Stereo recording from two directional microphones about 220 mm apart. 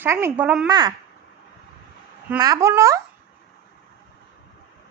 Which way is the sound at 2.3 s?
15° right (ahead or behind).